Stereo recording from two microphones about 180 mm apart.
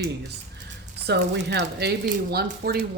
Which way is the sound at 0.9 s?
65° right (ahead or behind).